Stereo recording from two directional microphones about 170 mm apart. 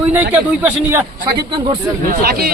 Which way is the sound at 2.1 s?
65° right (ahead or behind).